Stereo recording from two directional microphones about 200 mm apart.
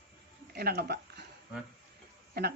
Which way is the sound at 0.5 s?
50° right (ahead or behind).